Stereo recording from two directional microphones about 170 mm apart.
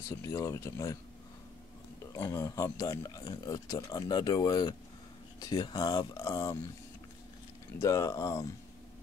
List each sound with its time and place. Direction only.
0.1 s speech: 20° left (ahead or behind)
2.1 s speech: 15° left (ahead or behind)
7.8 s speech: 20° left (ahead or behind)